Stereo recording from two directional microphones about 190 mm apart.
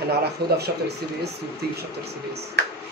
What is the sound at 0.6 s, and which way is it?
Speech, 60° right (ahead or behind).